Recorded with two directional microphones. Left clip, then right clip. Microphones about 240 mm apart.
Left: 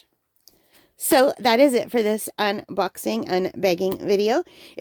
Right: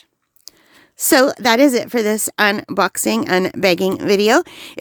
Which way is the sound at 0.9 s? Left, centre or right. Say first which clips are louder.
Right 4 dB; right.